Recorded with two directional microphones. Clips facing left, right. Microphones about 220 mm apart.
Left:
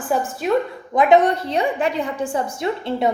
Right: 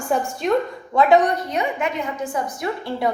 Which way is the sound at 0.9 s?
20° left (ahead or behind).